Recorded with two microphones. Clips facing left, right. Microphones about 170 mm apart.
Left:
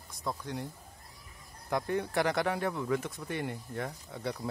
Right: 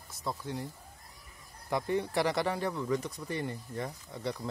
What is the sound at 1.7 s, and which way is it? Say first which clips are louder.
Speech: right 1 dB; centre (ahead or behind).